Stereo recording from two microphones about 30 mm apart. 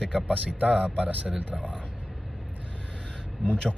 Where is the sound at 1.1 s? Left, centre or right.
Right.